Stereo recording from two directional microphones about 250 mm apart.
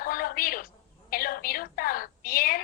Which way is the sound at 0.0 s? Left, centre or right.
Left.